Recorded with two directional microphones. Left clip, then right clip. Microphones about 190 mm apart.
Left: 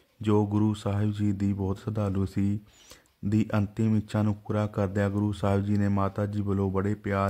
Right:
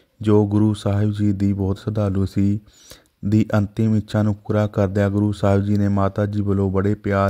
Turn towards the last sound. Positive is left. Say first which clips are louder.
# right 8 dB
turn(degrees=-30)  # may be behind; listen again after turning